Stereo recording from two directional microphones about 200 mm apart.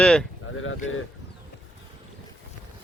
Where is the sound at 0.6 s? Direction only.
80° left.